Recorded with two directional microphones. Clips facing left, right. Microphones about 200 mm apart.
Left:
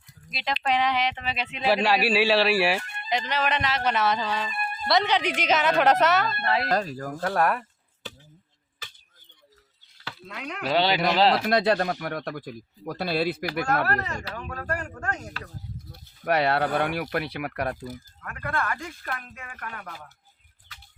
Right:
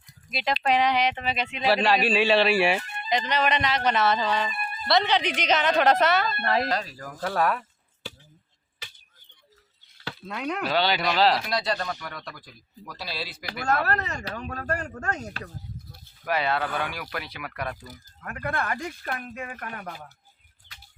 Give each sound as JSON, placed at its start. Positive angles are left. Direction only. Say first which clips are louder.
{"t": 0.3, "sound": "speech", "louder": "right 2 dB", "side_deg": 0}
{"t": 6.4, "sound": "speech", "louder": "right 1 dB", "side_deg": -45}
{"t": 6.7, "sound": "speech", "louder": "left 4 dB", "side_deg": 45}
{"t": 7.2, "sound": "speech", "louder": "left 1 dB", "side_deg": 0}
{"t": 10.0, "sound": "a sound", "louder": "right 5 dB", "side_deg": -40}
{"t": 10.7, "sound": "a man's voice", "louder": "left 3 dB", "side_deg": 25}
{"t": 11.4, "sound": "speech", "louder": "left 6 dB", "side_deg": 55}
{"t": 14.1, "sound": "speech", "louder": "right 1 dB", "side_deg": -20}
{"t": 15.9, "sound": "a sound", "louder": "left 4 dB", "side_deg": 65}
{"t": 16.6, "sound": "speech", "louder": "left 4 dB", "side_deg": 40}
{"t": 16.8, "sound": "speech", "louder": "left 6 dB", "side_deg": 55}
{"t": 18.2, "sound": "speech", "louder": "right 1 dB", "side_deg": -25}